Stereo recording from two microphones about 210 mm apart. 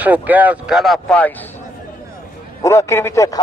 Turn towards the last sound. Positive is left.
turn(degrees=15)  # may be behind; listen again after turning